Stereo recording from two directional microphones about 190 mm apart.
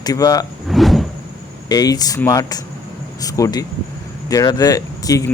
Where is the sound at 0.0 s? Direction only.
20° left (ahead or behind).